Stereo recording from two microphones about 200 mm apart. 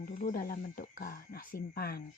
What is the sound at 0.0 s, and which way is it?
Speech, 40° left (ahead or behind).